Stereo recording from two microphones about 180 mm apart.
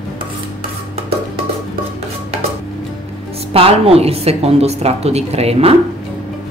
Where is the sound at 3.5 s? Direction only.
30° right (ahead or behind).